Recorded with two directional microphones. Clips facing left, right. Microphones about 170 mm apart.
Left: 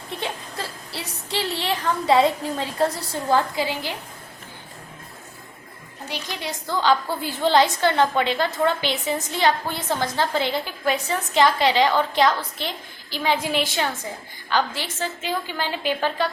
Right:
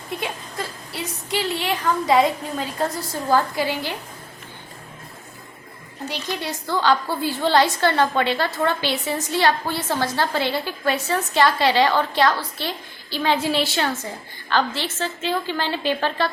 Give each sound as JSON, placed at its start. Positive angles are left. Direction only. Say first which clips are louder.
{"t": 0.2, "sound": "a woman's voice", "louder": "right 1 dB", "side_deg": 30}
{"t": 6.1, "sound": "a woman's voice", "louder": "right 3 dB", "side_deg": 15}